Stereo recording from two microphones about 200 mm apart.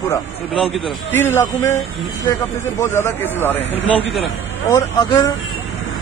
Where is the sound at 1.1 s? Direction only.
10° left (ahead or behind).